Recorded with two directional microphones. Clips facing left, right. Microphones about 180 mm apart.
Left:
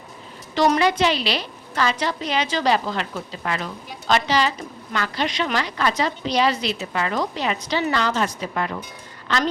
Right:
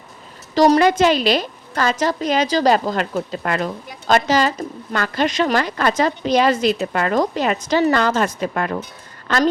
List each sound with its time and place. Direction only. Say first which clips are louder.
0.5 s a woman's voice: right 5 dB; 40° right (ahead or behind)